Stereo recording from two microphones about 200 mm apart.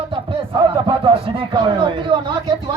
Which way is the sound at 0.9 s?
25° right (ahead or behind).